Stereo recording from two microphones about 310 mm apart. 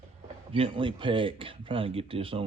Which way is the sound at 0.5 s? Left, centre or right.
Centre.